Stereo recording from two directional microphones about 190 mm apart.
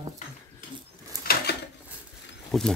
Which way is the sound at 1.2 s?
55° left (ahead or behind).